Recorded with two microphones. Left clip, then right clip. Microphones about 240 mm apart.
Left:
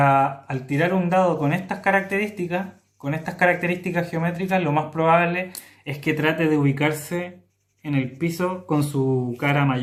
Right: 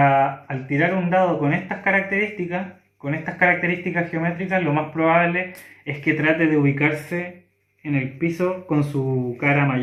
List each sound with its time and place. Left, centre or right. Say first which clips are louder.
0.0 s speech: right 1 dB; left